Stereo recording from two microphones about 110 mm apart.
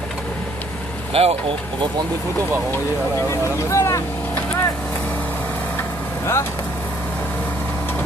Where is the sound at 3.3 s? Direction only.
25° left (ahead or behind).